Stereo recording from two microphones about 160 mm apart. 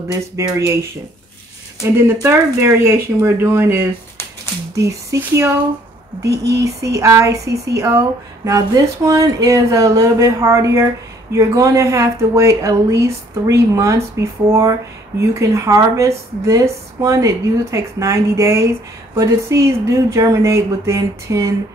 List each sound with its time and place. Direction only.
0.1 s speech: 20° right (ahead or behind)
6.6 s speech: 20° right (ahead or behind)